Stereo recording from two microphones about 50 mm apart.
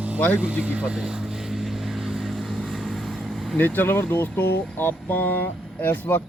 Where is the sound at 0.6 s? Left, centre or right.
Right.